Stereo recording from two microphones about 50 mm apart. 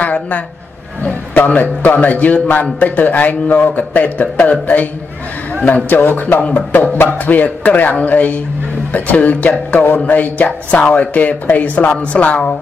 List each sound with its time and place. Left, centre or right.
0.0 s a sound: left
1.3 s a man's voice: left
5.9 s a man's voice: left
9.7 s a man's voice: left